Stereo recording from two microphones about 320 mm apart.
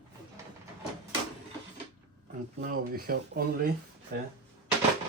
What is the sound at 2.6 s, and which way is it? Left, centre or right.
Speech, right.